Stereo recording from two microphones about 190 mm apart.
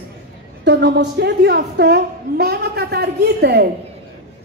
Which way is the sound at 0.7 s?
65° right (ahead or behind).